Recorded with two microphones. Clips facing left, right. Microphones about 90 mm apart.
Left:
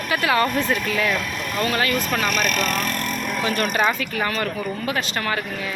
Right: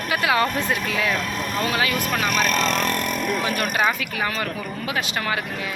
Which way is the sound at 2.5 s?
25° right (ahead or behind).